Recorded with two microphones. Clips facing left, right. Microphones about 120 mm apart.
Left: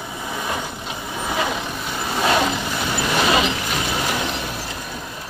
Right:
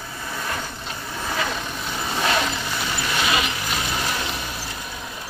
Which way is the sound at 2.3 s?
15° left (ahead or behind).